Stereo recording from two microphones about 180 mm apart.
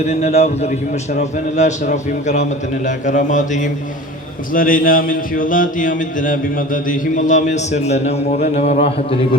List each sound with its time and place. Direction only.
0.1 s a man's voice: 35° left (ahead or behind)